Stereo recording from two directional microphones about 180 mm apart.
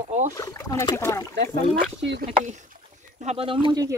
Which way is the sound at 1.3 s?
70° right (ahead or behind).